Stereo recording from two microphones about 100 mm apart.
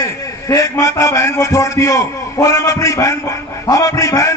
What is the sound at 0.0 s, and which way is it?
A man's voice, 35° left (ahead or behind).